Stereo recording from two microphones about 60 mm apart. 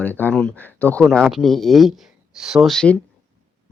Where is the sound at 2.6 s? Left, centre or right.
Centre.